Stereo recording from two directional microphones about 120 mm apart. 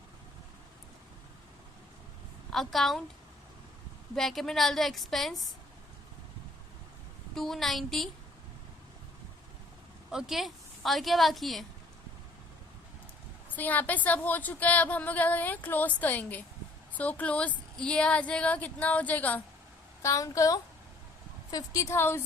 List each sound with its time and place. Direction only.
2.5 s a woman's voice: centre (ahead or behind)
4.1 s a woman's voice: centre (ahead or behind)
7.3 s a woman's voice: 5° left (ahead or behind)
10.1 s a woman's voice: 5° right (ahead or behind)
13.6 s speech: 15° left (ahead or behind)
20.0 s a woman's voice: 25° left (ahead or behind)